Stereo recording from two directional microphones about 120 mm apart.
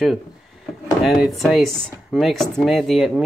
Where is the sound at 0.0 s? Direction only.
Centre (ahead or behind).